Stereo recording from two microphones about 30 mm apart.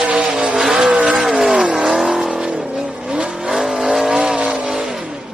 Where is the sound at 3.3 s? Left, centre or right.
Centre.